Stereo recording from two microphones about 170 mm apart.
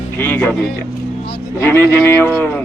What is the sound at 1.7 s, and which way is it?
Speech, 15° left (ahead or behind).